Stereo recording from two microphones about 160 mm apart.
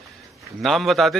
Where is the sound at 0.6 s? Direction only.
Centre (ahead or behind).